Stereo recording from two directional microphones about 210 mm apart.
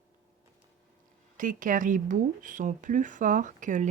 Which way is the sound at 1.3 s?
40° right (ahead or behind).